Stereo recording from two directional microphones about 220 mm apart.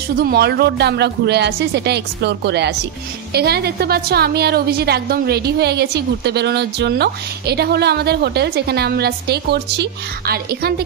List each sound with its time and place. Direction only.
0.2 s a woman's voice: 45° right (ahead or behind)